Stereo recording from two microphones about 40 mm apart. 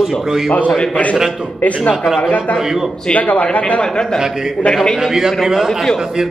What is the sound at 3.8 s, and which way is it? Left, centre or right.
Speech, centre.